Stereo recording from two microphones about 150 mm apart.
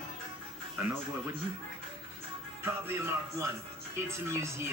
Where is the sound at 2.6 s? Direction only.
15° right (ahead or behind).